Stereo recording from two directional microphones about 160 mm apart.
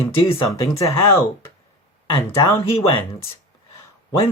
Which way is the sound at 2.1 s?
30° left (ahead or behind).